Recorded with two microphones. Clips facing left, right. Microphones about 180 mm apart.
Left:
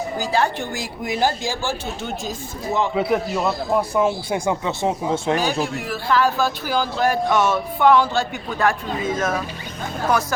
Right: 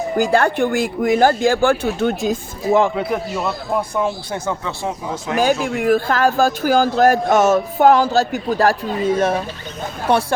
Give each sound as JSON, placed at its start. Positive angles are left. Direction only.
{"t": 0.2, "sound": "speech", "side_deg": -55}
{"t": 2.9, "sound": "a man's voice", "side_deg": 0}
{"t": 5.6, "sound": "a man's voice", "side_deg": -55}